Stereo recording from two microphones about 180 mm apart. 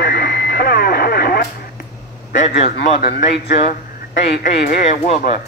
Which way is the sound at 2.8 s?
55° left (ahead or behind).